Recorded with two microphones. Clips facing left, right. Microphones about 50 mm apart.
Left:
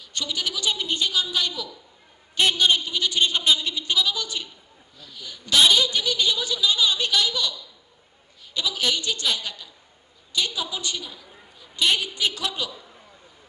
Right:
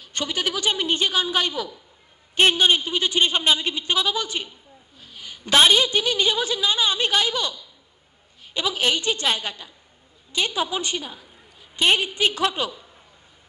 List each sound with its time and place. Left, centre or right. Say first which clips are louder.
0.0 s a woman's voice: right 3 dB; right